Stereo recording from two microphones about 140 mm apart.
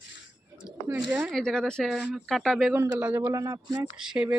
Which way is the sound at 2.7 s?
15° right (ahead or behind).